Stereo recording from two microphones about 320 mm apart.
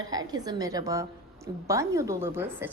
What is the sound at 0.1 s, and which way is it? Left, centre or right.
A woman's voice, centre.